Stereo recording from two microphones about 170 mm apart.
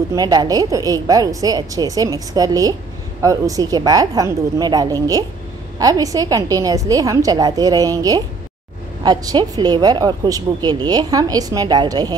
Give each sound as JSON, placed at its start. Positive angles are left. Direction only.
{"t": 0.1, "sound": "a woman's voice", "side_deg": -20}